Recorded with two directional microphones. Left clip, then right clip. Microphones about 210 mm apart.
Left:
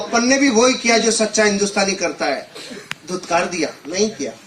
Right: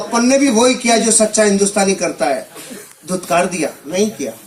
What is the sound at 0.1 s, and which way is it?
Speech, 60° right (ahead or behind).